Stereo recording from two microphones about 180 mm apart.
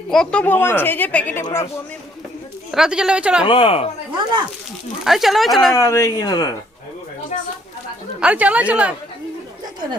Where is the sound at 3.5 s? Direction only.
30° left (ahead or behind).